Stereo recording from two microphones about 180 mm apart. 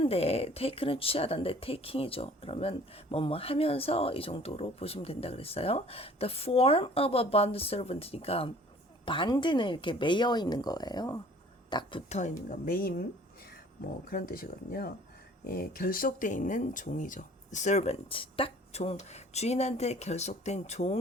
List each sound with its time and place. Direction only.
0.0 s speech: 35° left (ahead or behind)
12.5 s speech: 50° left (ahead or behind)
14.1 s speech: 55° left (ahead or behind)